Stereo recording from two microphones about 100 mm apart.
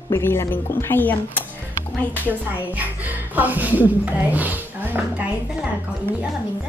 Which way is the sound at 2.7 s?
15° right (ahead or behind).